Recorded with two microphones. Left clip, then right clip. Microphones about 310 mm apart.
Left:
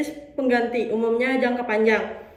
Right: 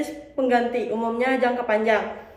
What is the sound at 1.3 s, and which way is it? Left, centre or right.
Speech, right.